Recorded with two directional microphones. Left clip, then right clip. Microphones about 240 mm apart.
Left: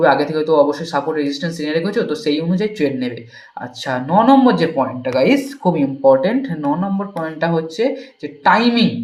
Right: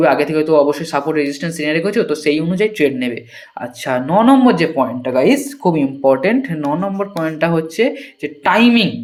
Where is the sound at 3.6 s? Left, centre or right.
Right.